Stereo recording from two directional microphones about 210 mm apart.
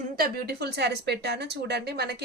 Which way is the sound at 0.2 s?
50° right (ahead or behind).